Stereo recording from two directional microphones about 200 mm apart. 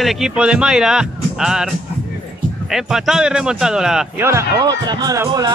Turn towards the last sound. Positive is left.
turn(degrees=-15)  # may be behind; listen again after turning